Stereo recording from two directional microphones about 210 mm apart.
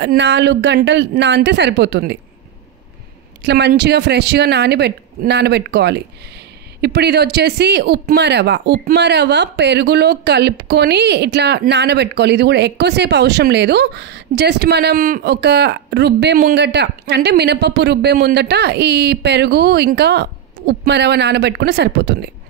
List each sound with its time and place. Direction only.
0.0 s a woman's voice: 55° right (ahead or behind)
3.4 s speech: 55° right (ahead or behind)